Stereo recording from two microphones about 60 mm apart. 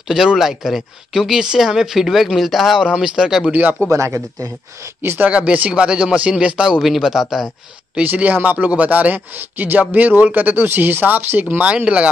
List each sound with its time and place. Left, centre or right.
0.1 s speech: centre
2.8 s speech: centre
3.9 s speech: right
5.2 s speech: right; by 7.4 s centre
8.0 s speech: right
11.6 s speech: centre